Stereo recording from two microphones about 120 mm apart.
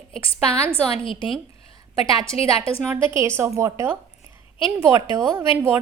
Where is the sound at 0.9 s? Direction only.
50° left (ahead or behind).